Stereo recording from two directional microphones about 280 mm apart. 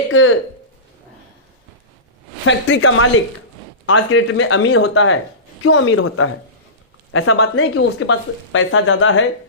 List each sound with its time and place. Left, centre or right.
0.1 s speech: left
2.5 s speech: left